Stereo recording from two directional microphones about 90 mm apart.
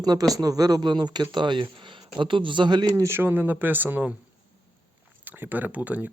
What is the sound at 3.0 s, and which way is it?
Speech, 25° right (ahead or behind).